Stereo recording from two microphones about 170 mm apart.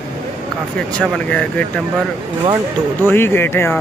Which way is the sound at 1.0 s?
10° left (ahead or behind).